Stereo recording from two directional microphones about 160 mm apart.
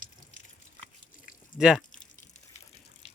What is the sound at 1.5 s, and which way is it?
Speech, 5° right (ahead or behind).